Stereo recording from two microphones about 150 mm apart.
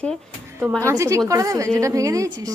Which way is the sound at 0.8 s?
20° right (ahead or behind).